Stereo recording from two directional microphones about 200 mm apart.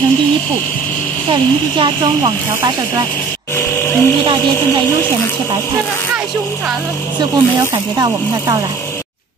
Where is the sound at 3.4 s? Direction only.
15° left (ahead or behind).